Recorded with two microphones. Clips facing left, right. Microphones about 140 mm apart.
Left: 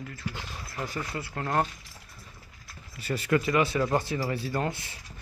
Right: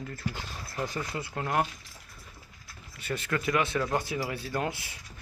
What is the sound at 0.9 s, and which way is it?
Speech, 15° right (ahead or behind).